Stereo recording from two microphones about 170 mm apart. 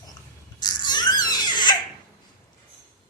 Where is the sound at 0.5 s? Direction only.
25° left (ahead or behind).